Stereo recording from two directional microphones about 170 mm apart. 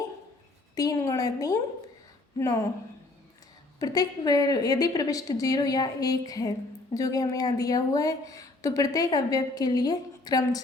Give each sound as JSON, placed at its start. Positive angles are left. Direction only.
{"t": 0.8, "sound": "a woman's voice", "side_deg": 20}
{"t": 3.8, "sound": "a woman's voice", "side_deg": 20}